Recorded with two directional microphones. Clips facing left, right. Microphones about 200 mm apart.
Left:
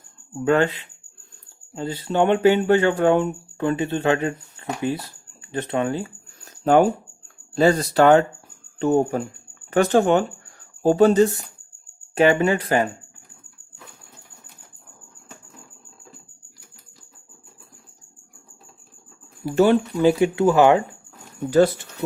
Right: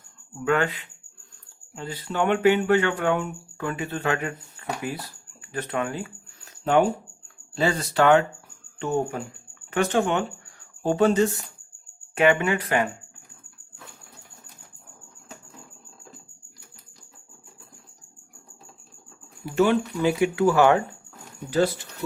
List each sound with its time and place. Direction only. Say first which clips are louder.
0.4 s speech: left 5 dB; 30° left (ahead or behind)
1.7 s speech: left 7 dB; 30° left (ahead or behind)
5.4 s a sound: left 4 dB; 25° left (ahead or behind)
7.5 s speech: left 6 dB; 40° left (ahead or behind)
19.5 s speech: left 4 dB; 35° left (ahead or behind); by 20.8 s 20° left (ahead or behind)